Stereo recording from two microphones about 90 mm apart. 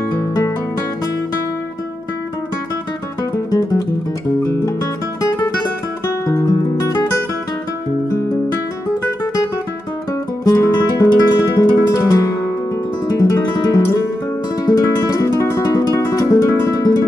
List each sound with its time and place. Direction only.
6.2 s music: 35° left (ahead or behind)
10.4 s guitar: 45° left (ahead or behind)
14.7 s music: 40° left (ahead or behind)